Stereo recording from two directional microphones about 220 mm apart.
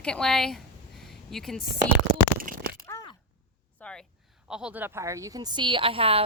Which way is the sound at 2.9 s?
15° left (ahead or behind).